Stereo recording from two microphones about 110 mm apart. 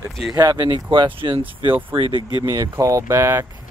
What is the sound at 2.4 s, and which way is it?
Speech, 30° right (ahead or behind).